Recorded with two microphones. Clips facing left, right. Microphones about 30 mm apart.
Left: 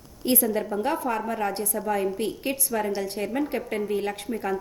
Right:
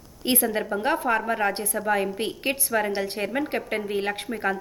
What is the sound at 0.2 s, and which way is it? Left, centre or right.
A woman's voice, right.